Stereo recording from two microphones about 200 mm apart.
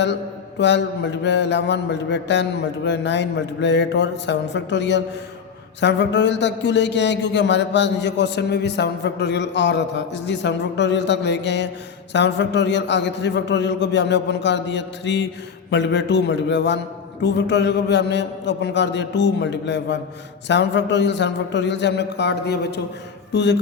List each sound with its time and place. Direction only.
0.6 s speech: 60° left (ahead or behind)